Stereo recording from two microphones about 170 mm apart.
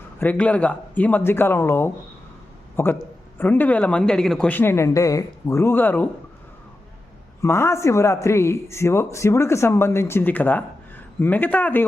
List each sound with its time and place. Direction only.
0.2 s a man's voice: 10° left (ahead or behind)
7.4 s a man's voice: 15° left (ahead or behind)